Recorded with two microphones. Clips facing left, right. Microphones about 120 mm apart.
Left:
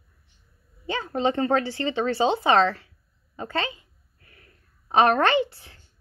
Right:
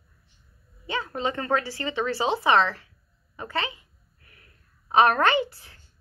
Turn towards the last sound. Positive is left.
turn(degrees=30)  # may be behind; listen again after turning